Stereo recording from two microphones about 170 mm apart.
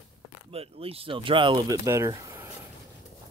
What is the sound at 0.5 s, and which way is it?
Speech, 35° right (ahead or behind).